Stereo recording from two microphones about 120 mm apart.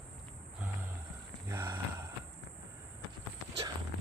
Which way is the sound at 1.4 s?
20° right (ahead or behind).